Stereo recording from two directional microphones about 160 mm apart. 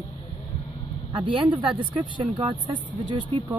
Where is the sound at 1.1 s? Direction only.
30° right (ahead or behind).